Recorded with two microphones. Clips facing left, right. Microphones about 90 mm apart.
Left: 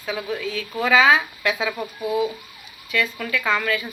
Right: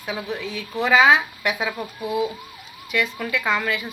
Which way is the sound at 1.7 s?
Centre (ahead or behind).